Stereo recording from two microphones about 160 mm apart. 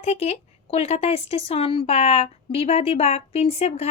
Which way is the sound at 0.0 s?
45° left (ahead or behind).